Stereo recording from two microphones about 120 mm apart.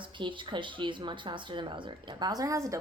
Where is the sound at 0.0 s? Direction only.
40° right (ahead or behind).